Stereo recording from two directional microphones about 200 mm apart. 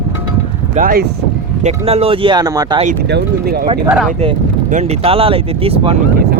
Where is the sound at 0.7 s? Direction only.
45° right (ahead or behind).